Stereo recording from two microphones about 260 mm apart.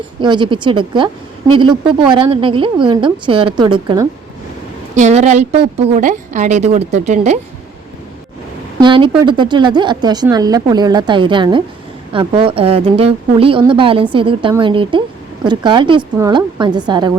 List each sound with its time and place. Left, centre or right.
0.2 s a woman's voice: centre
8.8 s a woman's voice: centre